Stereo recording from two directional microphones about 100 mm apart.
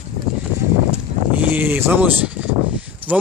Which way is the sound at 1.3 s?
20° right (ahead or behind).